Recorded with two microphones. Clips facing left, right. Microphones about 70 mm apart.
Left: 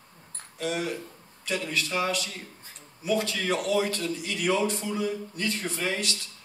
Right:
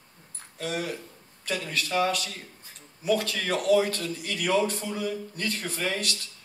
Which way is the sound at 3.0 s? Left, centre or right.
Right.